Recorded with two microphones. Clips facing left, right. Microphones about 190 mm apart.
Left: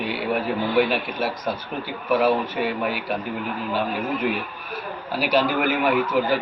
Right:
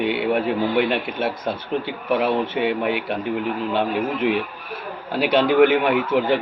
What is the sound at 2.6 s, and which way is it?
Speech, 20° right (ahead or behind).